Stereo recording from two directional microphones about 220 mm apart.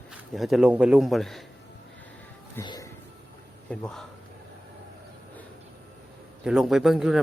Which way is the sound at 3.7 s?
5° left (ahead or behind).